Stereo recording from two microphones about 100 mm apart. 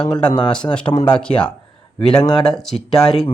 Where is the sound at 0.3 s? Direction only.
50° left (ahead or behind).